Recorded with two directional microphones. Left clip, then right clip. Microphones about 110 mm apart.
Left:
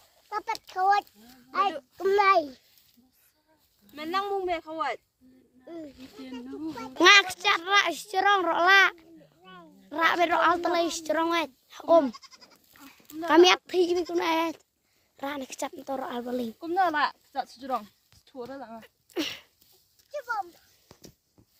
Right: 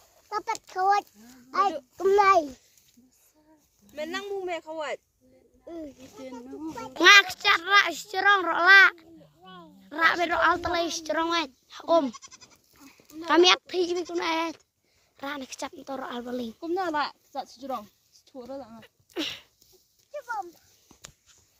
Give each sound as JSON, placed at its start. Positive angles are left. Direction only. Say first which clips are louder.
{"t": 0.3, "sound": "a child's voice", "louder": "right 1 dB", "side_deg": -80}
{"t": 2.0, "sound": "a child's voice", "louder": "right 2 dB", "side_deg": -80}
{"t": 3.8, "sound": "speech", "louder": "left 4 dB", "side_deg": 0}
{"t": 6.7, "sound": "a child's voice", "louder": "right 1 dB", "side_deg": -35}
{"t": 7.0, "sound": "a child's voice", "louder": "right 2 dB", "side_deg": 30}
{"t": 9.4, "sound": "a sound", "louder": "right 2 dB", "side_deg": -25}
{"t": 9.9, "sound": "speech", "louder": "even", "side_deg": 30}
{"t": 13.2, "sound": "a child's voice", "louder": "left 1 dB", "side_deg": 40}
{"t": 14.1, "sound": "a child's voice", "louder": "left 2 dB", "side_deg": 40}
{"t": 16.7, "sound": "speech", "louder": "left 4 dB", "side_deg": 0}
{"t": 18.8, "sound": "a sound", "louder": "left 2 dB", "side_deg": 35}